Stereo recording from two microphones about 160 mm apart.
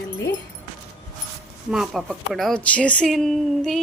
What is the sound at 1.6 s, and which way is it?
A woman's voice, 5° right (ahead or behind).